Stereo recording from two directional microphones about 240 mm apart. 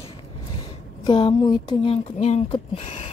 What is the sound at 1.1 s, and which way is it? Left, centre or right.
Speech, centre.